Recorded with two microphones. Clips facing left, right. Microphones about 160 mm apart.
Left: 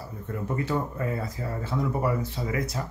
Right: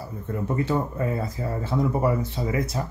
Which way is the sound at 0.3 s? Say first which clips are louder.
Right 3 dB; 25° right (ahead or behind).